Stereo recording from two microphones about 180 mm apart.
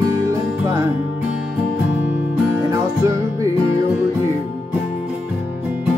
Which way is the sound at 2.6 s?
15° right (ahead or behind).